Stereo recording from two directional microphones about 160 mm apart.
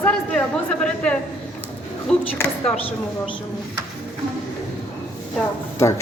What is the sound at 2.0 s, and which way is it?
Speech, 5° left (ahead or behind).